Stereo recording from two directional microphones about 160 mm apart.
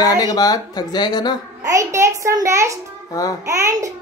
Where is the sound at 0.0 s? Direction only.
25° left (ahead or behind).